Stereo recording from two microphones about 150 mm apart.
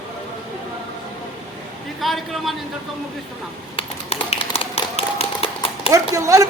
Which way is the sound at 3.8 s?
40° left (ahead or behind).